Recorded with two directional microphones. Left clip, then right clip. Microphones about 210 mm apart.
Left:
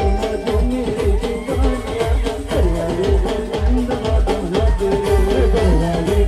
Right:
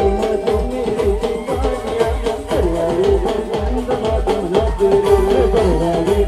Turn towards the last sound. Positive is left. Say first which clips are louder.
# right 3 dB
turn(degrees=-15)  # may be behind; listen again after turning